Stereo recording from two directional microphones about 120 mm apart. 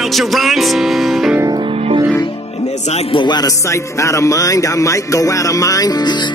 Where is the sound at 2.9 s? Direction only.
45° left (ahead or behind).